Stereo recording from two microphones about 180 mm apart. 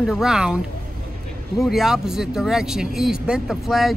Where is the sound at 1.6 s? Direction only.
Centre (ahead or behind).